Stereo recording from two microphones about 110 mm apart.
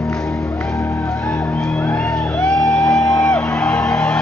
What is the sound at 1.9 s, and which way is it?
Music, 15° left (ahead or behind).